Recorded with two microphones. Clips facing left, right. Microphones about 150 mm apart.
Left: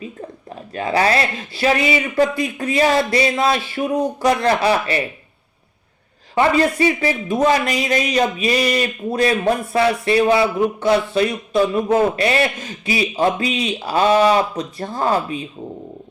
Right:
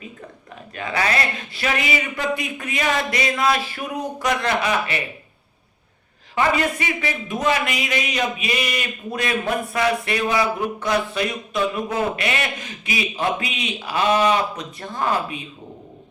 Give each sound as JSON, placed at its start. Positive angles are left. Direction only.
{"t": 0.7, "sound": "speech", "side_deg": 35}
{"t": 6.3, "sound": "speech", "side_deg": 35}